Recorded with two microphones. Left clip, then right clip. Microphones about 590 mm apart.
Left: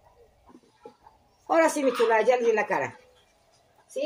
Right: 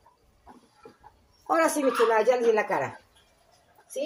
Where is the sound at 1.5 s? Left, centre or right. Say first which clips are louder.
Left 1 dB; right.